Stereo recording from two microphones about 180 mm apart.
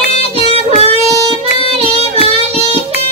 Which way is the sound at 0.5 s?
35° right (ahead or behind).